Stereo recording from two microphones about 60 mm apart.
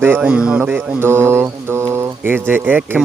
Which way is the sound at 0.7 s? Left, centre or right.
Right.